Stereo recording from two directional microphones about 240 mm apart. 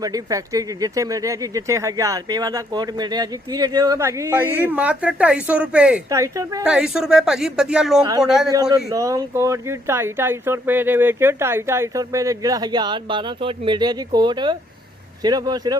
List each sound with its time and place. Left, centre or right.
0.0 s speech: centre
6.7 s speech: centre
8.7 s speech: centre